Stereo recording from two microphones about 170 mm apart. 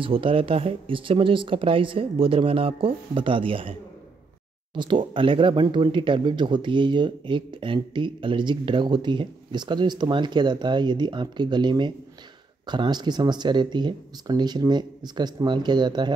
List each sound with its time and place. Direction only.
0.0 s speech: 30° right (ahead or behind)
4.7 s speech: 30° right (ahead or behind)